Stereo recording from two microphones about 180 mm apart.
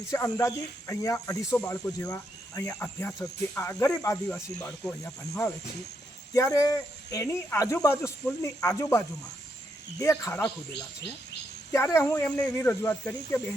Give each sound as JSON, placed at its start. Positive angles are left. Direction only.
{"t": 0.1, "sound": "speech", "side_deg": 15}